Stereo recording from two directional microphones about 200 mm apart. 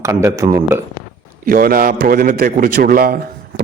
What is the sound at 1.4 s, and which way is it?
A man's voice, 45° right (ahead or behind).